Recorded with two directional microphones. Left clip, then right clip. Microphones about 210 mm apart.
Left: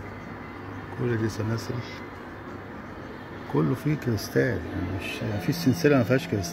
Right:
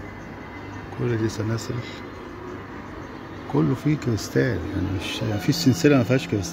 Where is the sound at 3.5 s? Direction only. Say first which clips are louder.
Right 3 dB; 10° right (ahead or behind).